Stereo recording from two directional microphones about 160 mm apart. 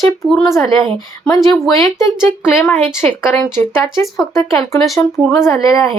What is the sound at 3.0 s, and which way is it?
Speech, 10° left (ahead or behind).